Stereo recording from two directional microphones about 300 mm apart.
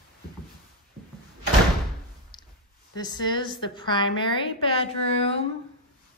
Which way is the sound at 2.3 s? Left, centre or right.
Centre.